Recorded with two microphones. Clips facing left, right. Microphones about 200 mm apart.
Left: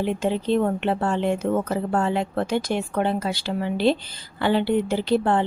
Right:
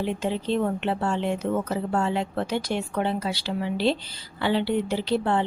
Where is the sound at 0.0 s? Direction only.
50° left (ahead or behind).